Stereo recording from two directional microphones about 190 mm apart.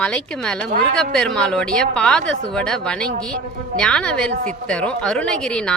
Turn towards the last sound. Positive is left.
turn(degrees=5)  # may be behind; listen again after turning